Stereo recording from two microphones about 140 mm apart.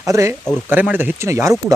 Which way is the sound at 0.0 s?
20° right (ahead or behind).